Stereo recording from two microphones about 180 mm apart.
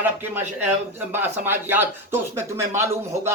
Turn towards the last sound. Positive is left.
turn(degrees=-15)  # may be behind; listen again after turning